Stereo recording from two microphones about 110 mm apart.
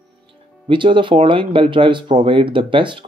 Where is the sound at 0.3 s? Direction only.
50° right (ahead or behind).